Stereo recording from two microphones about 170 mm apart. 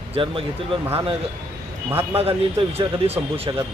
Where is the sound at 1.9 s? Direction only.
15° right (ahead or behind).